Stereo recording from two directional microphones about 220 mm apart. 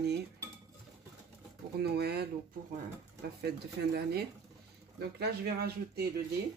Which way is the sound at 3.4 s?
45° right (ahead or behind).